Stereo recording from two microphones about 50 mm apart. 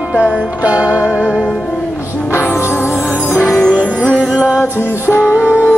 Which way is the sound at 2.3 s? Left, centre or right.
Left.